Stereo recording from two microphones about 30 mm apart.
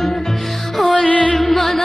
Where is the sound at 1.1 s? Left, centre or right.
Left.